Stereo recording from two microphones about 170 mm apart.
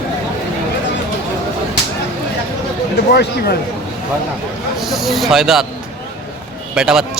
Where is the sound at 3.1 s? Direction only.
70° left (ahead or behind).